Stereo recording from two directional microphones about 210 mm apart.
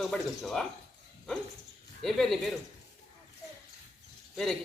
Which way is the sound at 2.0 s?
Centre (ahead or behind).